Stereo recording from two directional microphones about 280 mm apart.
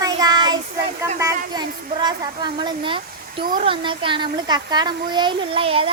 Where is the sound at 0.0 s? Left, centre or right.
Centre.